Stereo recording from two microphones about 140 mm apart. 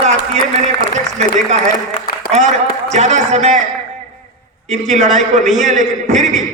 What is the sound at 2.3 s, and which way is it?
A man's voice, 55° right (ahead or behind).